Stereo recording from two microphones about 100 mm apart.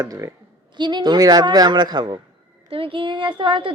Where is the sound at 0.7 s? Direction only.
50° right (ahead or behind).